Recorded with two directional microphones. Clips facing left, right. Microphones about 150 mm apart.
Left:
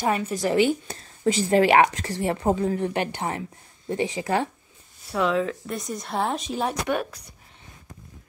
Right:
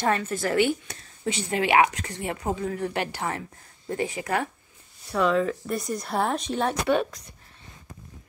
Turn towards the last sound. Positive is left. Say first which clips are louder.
# right 3 dB
turn(degrees=5)  # may be behind; listen again after turning